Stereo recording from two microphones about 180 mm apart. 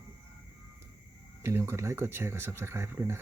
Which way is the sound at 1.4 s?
15° right (ahead or behind).